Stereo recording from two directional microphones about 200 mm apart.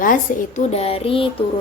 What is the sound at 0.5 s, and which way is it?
Speech, 30° left (ahead or behind).